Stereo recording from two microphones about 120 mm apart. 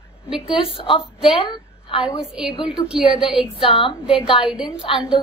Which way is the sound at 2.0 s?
5° right (ahead or behind).